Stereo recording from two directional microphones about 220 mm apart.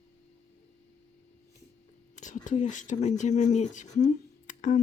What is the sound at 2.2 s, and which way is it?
Speech, 35° left (ahead or behind).